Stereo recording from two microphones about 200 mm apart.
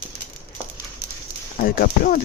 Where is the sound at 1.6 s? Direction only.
45° left (ahead or behind).